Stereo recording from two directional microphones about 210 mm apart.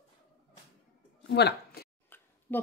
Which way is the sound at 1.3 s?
55° left (ahead or behind).